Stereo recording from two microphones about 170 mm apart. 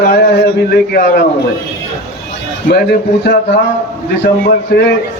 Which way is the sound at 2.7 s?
70° left (ahead or behind).